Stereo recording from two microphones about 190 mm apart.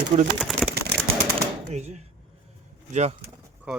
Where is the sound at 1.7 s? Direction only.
35° right (ahead or behind).